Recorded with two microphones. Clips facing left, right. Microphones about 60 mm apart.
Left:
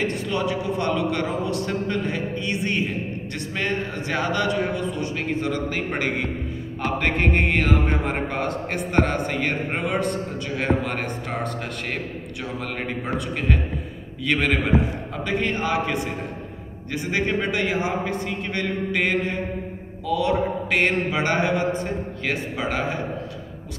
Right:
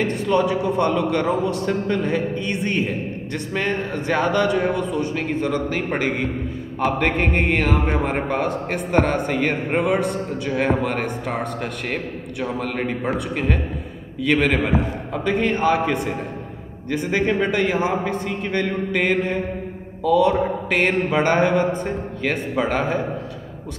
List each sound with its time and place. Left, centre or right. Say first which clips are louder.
0.0 s a man's voice: right 5 dB; centre
12.5 s a man's voice: right 2 dB; centre